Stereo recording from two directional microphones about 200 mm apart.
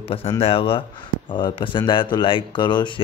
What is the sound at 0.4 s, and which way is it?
Speech, 30° left (ahead or behind).